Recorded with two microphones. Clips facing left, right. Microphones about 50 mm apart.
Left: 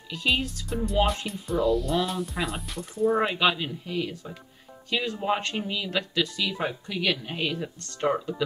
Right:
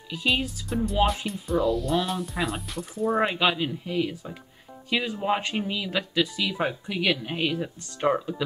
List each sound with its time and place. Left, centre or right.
0.1 s speech: centre